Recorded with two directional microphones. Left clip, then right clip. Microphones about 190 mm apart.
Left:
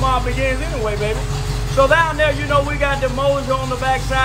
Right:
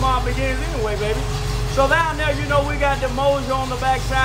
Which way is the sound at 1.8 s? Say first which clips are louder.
Left 4 dB; 5° right (ahead or behind).